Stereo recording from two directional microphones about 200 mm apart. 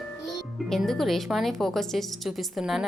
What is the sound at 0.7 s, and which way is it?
A woman's voice, centre (ahead or behind).